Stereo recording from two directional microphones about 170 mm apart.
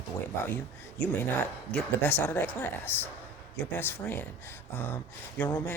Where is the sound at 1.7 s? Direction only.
10° left (ahead or behind).